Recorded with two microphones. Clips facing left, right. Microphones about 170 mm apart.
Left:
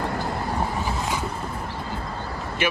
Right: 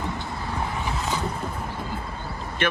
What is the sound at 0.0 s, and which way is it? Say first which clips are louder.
Vehicle: left 4 dB; 75° left (ahead or behind).